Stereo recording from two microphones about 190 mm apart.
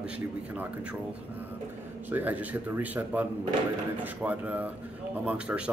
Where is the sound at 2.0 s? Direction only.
10° right (ahead or behind).